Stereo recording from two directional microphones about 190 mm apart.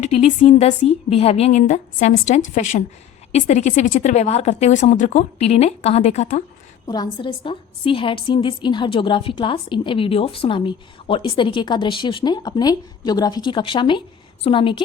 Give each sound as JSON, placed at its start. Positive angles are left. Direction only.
{"t": 0.0, "sound": "speech", "side_deg": 35}
{"t": 6.8, "sound": "a woman's voice", "side_deg": 20}